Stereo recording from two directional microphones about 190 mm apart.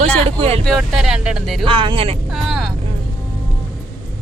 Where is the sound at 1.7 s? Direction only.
25° right (ahead or behind).